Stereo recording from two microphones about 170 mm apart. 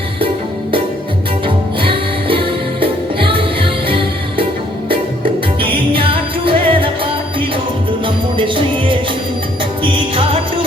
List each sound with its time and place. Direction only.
1.5 s music: 30° right (ahead or behind)